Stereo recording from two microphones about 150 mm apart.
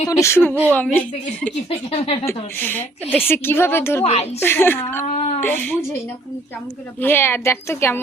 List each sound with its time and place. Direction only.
0.1 s a woman's voice: 20° left (ahead or behind)
1.9 s speech: 40° left (ahead or behind)
2.2 s a woman's voice: 15° left (ahead or behind)
4.0 s a woman's voice: 45° left (ahead or behind)
4.4 s a woman's voice: 15° left (ahead or behind)
5.0 s a sound: 50° left (ahead or behind)
5.4 s speech: 10° left (ahead or behind)
7.0 s a woman's voice: 15° left (ahead or behind)